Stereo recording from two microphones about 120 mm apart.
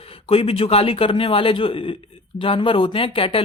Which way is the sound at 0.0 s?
50° left (ahead or behind).